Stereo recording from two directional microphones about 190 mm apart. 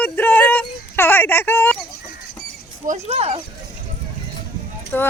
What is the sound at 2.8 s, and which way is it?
Speech, 35° right (ahead or behind).